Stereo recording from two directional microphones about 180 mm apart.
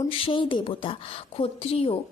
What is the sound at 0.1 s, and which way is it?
A woman's voice, 30° left (ahead or behind).